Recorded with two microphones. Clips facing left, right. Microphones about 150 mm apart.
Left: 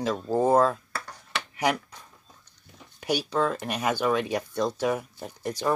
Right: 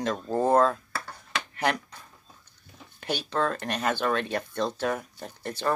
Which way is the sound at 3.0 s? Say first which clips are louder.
Left 2 dB; 10° left (ahead or behind).